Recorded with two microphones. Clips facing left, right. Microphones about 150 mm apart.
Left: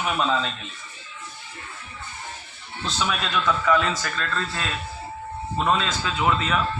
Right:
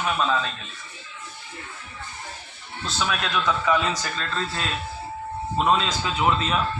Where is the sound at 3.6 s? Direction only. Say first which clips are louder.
Left 1 dB; 15° right (ahead or behind).